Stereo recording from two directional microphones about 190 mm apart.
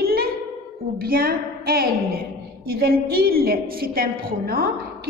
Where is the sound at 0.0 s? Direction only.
55° right (ahead or behind).